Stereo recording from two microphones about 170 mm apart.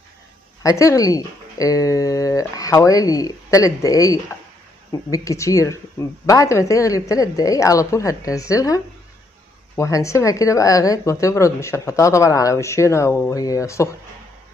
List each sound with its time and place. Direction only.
0.6 s a woman's voice: 20° left (ahead or behind)